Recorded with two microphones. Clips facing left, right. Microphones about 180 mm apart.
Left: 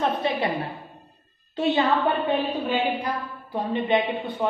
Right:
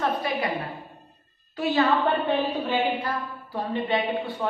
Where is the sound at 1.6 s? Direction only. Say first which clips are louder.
Left 1 dB; 20° left (ahead or behind).